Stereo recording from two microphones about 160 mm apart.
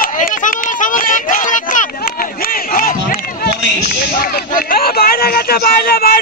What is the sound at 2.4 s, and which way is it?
Crowd, 65° left (ahead or behind).